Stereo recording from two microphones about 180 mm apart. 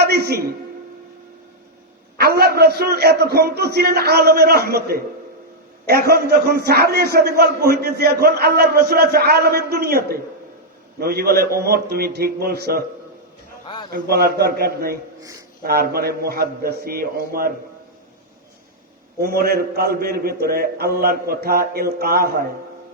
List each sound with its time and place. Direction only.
0.0 s a sound: 60° right (ahead or behind)
2.1 s a man's voice: 60° right (ahead or behind)
13.9 s a man's voice: 55° right (ahead or behind)
15.2 s speech: 20° right (ahead or behind)
15.6 s a man's voice: 55° right (ahead or behind)
19.2 s a man's voice: 55° right (ahead or behind)